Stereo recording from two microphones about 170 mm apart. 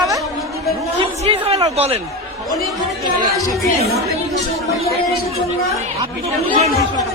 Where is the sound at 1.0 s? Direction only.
35° right (ahead or behind).